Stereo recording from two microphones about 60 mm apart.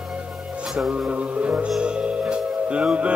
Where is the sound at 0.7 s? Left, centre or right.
Centre.